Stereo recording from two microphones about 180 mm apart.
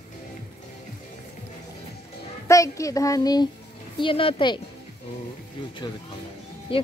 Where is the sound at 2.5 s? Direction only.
15° left (ahead or behind).